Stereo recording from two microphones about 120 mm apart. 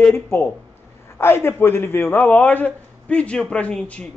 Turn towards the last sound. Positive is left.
turn(degrees=10)  # may be behind; listen again after turning